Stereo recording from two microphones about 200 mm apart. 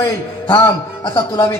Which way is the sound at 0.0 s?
20° left (ahead or behind).